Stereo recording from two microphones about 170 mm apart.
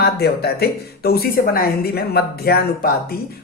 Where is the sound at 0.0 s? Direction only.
70° left (ahead or behind).